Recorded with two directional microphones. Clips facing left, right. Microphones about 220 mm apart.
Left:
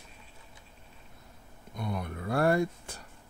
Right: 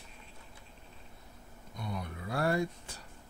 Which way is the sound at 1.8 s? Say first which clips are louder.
Left 5 dB; 55° left (ahead or behind).